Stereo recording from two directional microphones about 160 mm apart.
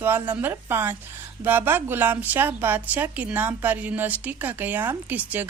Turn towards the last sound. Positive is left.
turn(degrees=-10)  # may be behind; listen again after turning